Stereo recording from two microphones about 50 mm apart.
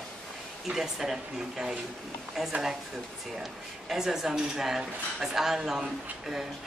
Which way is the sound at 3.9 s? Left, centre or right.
Centre.